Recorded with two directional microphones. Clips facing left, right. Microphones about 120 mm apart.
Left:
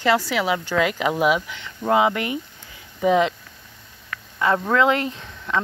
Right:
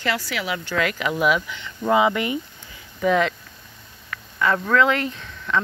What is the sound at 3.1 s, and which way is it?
Speech, 20° left (ahead or behind).